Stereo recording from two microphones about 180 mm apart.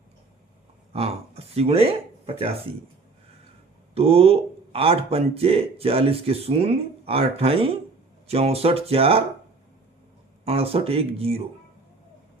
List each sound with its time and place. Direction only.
0.9 s speech: 35° right (ahead or behind)
3.9 s speech: 30° right (ahead or behind)
10.4 s speech: 35° right (ahead or behind)